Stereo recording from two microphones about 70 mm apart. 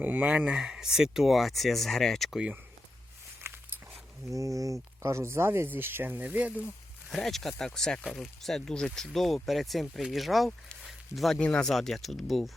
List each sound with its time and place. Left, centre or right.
0.0 s speech: right; by 2.4 s centre
3.4 s a sound: right
4.3 s speech: right
7.1 s speech: centre
10.8 s a sound: centre
11.3 s speech: centre